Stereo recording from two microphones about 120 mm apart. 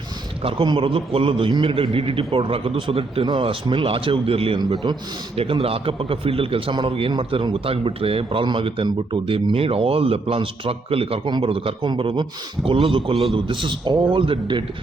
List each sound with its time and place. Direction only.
0.4 s a man's voice: 45° right (ahead or behind)
5.4 s a man's voice: 55° right (ahead or behind)